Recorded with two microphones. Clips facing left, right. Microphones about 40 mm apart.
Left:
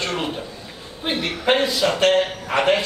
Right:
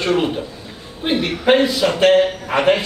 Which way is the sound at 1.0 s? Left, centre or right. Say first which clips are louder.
Right 4 dB; centre.